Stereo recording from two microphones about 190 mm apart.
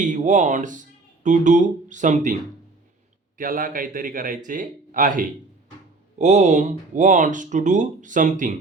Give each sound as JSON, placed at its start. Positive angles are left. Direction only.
{"t": 0.0, "sound": "speech", "side_deg": -40}
{"t": 3.3, "sound": "a man's voice", "side_deg": -45}